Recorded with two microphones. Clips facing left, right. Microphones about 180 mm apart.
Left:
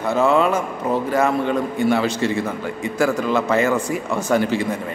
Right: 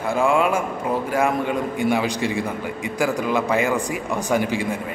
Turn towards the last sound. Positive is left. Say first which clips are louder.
# left 2 dB
turn(degrees=-10)  # may be behind; listen again after turning